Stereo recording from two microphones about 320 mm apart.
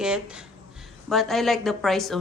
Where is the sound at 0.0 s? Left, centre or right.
Centre.